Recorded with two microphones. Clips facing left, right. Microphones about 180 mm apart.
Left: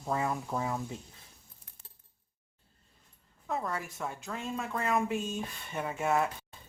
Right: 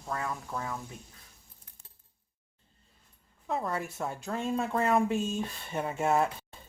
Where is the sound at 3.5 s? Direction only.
25° right (ahead or behind).